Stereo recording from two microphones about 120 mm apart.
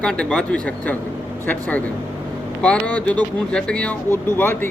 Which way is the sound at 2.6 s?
10° left (ahead or behind).